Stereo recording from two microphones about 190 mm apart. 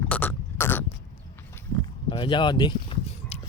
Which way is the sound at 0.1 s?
10° left (ahead or behind).